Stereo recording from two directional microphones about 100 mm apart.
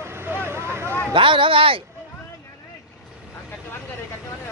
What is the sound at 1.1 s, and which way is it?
Speech, 60° right (ahead or behind).